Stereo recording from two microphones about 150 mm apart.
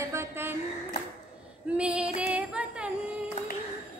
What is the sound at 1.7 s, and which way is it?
Female singing, 10° right (ahead or behind).